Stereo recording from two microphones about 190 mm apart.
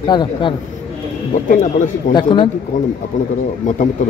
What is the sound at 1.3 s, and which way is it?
Speech, 40° left (ahead or behind).